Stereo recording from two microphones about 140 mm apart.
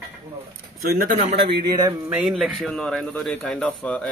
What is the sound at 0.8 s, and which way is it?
Speech, 90° right.